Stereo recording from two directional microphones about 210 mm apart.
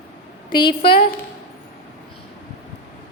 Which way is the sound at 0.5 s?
25° left (ahead or behind).